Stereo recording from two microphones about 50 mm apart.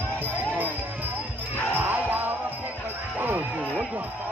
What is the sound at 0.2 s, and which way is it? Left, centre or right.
Music, right.